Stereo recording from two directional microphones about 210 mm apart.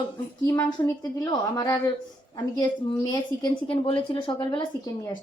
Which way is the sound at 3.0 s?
20° left (ahead or behind).